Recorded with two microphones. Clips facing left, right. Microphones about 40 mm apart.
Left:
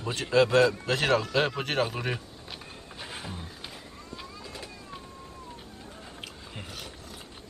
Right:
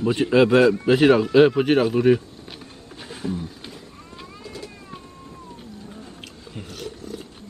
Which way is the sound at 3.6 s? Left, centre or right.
Centre.